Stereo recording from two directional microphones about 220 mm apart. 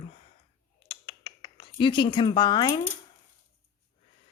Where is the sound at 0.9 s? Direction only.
25° left (ahead or behind).